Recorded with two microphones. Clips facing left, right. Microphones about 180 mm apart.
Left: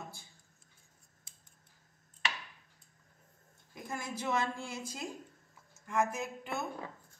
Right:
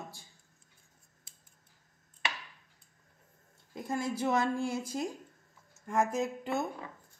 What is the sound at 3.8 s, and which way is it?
Speech, 35° right (ahead or behind).